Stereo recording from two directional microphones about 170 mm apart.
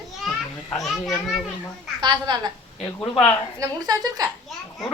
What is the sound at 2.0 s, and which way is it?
Speech, 25° right (ahead or behind).